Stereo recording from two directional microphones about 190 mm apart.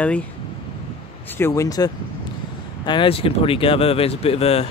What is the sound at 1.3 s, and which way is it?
Speech, 15° left (ahead or behind).